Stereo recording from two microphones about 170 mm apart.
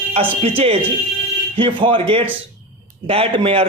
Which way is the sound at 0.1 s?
35° right (ahead or behind).